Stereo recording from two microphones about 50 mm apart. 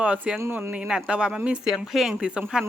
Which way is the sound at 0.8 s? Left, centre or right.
Centre.